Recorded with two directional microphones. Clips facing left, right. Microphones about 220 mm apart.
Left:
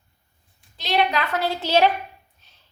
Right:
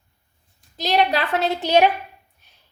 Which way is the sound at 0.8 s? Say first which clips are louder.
Right 2 dB; 40° right (ahead or behind).